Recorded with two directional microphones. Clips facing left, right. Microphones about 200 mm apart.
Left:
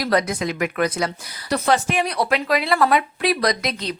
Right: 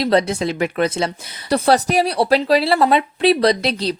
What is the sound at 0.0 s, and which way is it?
Speech, 30° right (ahead or behind).